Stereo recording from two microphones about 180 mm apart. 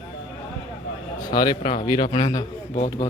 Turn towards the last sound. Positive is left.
turn(degrees=40)  # may be behind; listen again after turning